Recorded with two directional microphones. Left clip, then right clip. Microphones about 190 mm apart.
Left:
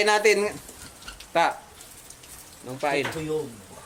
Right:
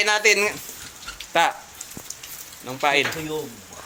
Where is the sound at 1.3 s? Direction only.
Centre (ahead or behind).